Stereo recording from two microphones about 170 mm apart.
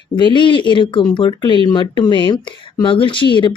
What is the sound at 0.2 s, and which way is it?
Speech, 30° left (ahead or behind).